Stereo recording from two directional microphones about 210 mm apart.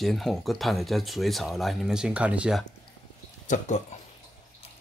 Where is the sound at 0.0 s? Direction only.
Centre (ahead or behind).